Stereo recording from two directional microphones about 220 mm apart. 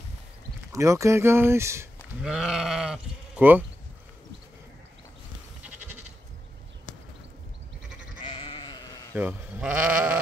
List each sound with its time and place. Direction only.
0.7 s speech: 15° right (ahead or behind)
8.2 s sheep: 25° left (ahead or behind)
9.1 s speech: 5° right (ahead or behind)